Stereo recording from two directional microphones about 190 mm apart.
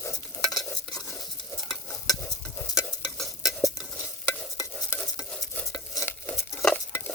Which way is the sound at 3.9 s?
15° left (ahead or behind).